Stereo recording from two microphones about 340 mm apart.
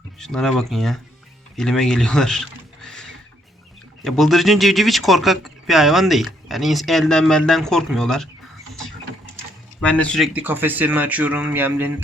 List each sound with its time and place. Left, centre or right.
0.2 s speech: centre
4.0 s speech: centre
9.8 s speech: centre